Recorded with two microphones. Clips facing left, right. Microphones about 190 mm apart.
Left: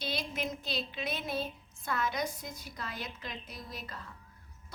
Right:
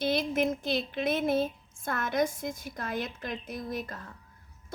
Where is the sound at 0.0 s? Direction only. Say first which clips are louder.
Right 9 dB; 50° right (ahead or behind).